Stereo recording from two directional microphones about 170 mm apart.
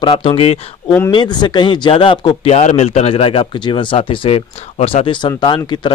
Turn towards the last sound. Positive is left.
turn(degrees=25)  # may be behind; listen again after turning